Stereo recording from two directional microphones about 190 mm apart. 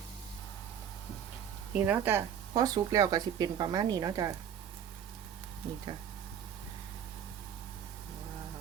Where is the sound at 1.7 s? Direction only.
5° right (ahead or behind).